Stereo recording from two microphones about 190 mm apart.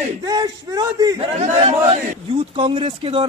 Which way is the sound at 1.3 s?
35° right (ahead or behind).